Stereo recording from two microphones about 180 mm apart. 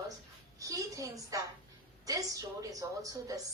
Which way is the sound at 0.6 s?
20° right (ahead or behind).